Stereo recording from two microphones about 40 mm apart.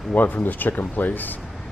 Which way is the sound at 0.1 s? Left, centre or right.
Left.